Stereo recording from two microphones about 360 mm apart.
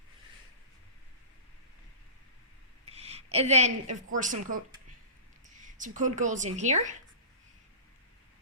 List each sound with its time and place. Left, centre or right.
2.9 s a woman's voice: centre